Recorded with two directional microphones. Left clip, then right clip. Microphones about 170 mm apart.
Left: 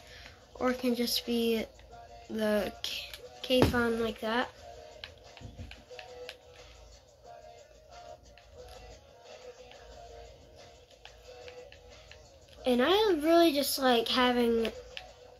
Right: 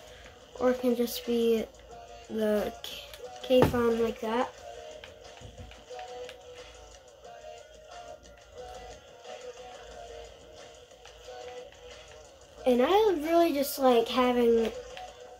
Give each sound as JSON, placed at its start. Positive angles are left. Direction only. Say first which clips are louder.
{"t": 0.6, "sound": "speech", "louder": "right 4 dB", "side_deg": -15}
{"t": 4.0, "sound": "a child's voice", "louder": "right 2 dB", "side_deg": 0}
{"t": 12.6, "sound": "a child's voice", "louder": "right 3 dB", "side_deg": 0}